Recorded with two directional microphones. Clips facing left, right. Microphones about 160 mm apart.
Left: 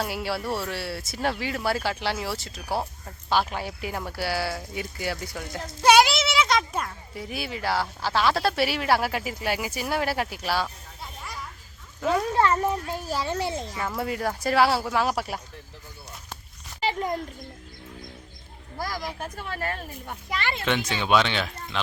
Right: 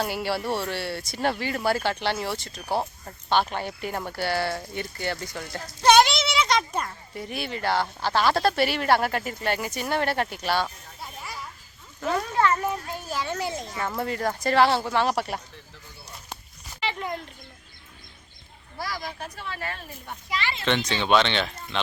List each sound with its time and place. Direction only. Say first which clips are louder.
0.0 s a child's voice: right 2 dB; centre (ahead or behind)
12.4 s speech: left 1 dB; 30° left (ahead or behind)
13.7 s speech: even; 5° left (ahead or behind)
16.8 s a sound: left 4 dB; 40° left (ahead or behind)
18.8 s speech: left 2 dB; 45° left (ahead or behind)
20.7 s speech: right 2 dB; 10° left (ahead or behind)